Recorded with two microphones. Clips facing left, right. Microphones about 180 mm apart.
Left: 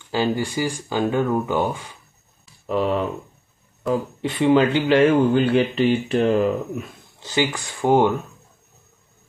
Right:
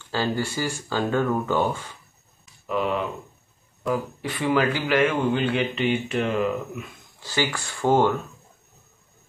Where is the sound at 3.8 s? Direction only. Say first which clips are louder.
Left 3 dB; 25° left (ahead or behind).